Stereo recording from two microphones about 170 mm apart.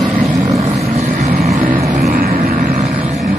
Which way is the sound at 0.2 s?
35° right (ahead or behind).